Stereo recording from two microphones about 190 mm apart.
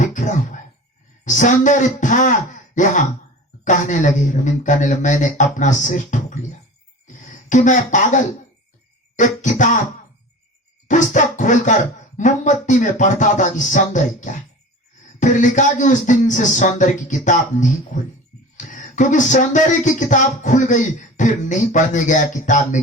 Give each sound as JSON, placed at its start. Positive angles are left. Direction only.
{"t": 0.0, "sound": "a sound", "side_deg": 40}
{"t": 1.2, "sound": "speech", "side_deg": 40}
{"t": 10.8, "sound": "music", "side_deg": 40}
{"t": 12.1, "sound": "speech", "side_deg": 40}